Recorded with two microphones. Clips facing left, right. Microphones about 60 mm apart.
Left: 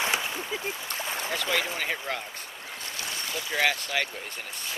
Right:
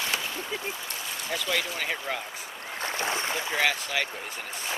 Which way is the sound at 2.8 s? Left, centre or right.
Right.